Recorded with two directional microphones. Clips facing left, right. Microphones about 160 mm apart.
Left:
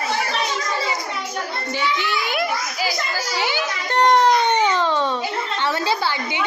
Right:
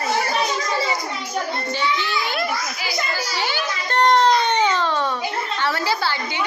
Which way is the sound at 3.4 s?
15° left (ahead or behind).